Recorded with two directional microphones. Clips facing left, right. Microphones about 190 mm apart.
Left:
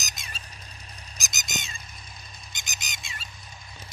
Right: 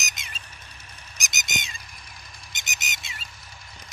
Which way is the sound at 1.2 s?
Centre (ahead or behind).